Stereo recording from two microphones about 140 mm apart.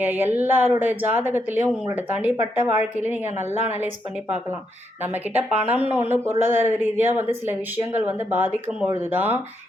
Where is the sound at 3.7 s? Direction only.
10° right (ahead or behind).